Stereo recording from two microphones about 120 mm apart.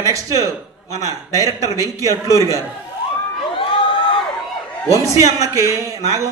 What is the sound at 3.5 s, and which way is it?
Crowd, 45° left (ahead or behind).